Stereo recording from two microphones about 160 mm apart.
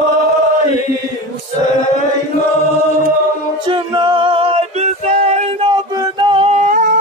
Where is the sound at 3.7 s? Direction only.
30° right (ahead or behind).